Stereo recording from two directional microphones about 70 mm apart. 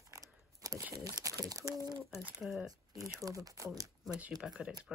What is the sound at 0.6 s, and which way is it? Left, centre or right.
Crumpling, right.